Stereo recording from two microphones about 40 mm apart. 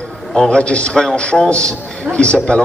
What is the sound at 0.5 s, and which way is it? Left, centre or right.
Speech, left.